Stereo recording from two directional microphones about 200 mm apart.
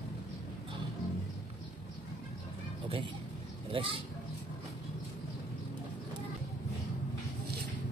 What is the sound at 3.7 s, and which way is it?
Speech, 30° right (ahead or behind).